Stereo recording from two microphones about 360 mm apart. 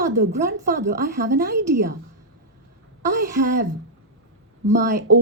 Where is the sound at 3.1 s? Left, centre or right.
Right.